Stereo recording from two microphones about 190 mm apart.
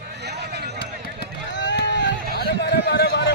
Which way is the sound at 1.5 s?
70° left (ahead or behind).